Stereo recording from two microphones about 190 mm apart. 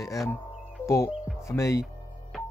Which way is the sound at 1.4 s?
15° left (ahead or behind).